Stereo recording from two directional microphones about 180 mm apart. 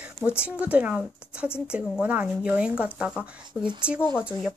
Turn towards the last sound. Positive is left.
turn(degrees=-5)  # may be behind; listen again after turning